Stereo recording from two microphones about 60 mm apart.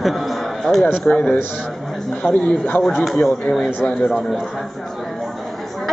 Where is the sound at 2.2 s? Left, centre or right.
Centre.